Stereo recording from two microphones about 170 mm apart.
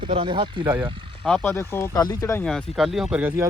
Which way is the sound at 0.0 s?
30° right (ahead or behind).